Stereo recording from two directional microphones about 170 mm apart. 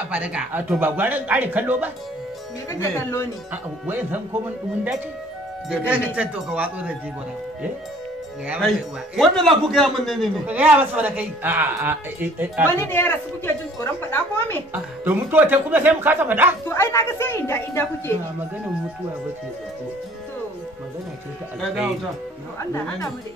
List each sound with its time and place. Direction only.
0.1 s speech: 5° right (ahead or behind)
2.7 s a woman's voice: 15° left (ahead or behind)
3.8 s speech: 10° right (ahead or behind)
5.7 s speech: 10° right (ahead or behind)
8.5 s speech: centre (ahead or behind)
12.6 s a woman's voice: 15° left (ahead or behind)
14.7 s speech: 10° right (ahead or behind)
16.6 s a woman's voice: 15° left (ahead or behind)